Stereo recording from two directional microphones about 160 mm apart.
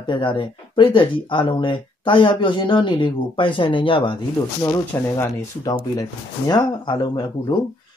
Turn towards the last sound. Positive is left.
turn(degrees=25)  # may be behind; listen again after turning